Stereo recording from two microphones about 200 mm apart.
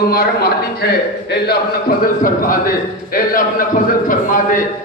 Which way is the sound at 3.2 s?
45° left (ahead or behind).